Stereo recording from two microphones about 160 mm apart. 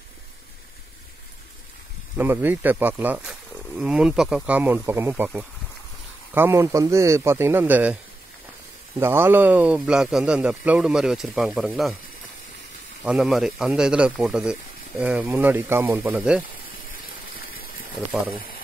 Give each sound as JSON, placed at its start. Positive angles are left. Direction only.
{"t": 2.1, "sound": "speech", "side_deg": -15}
{"t": 9.0, "sound": "a man's voice", "side_deg": -15}
{"t": 13.0, "sound": "speech", "side_deg": -5}
{"t": 17.3, "sound": "water", "side_deg": 65}